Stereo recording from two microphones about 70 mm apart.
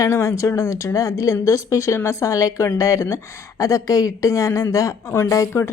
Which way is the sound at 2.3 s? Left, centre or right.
Left.